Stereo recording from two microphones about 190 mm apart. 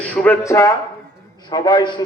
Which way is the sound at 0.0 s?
10° left (ahead or behind).